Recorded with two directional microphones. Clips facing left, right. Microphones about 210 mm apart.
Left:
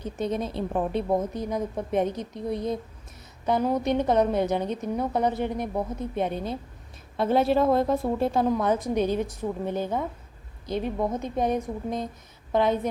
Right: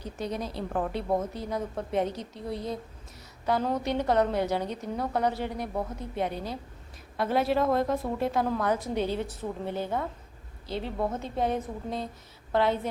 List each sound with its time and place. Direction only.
0.0 s a woman's voice: 20° left (ahead or behind)